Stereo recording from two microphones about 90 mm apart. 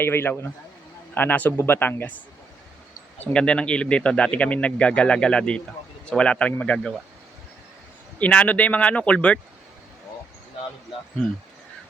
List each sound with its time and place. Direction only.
0.0 s a man's voice: 25° left (ahead or behind)
3.3 s speech: 10° left (ahead or behind)
8.2 s speech: 15° left (ahead or behind)